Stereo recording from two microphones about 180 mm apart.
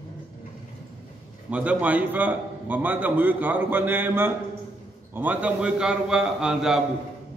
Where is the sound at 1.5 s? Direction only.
10° right (ahead or behind).